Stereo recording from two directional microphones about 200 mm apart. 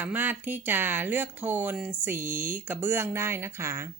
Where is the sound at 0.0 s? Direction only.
10° right (ahead or behind).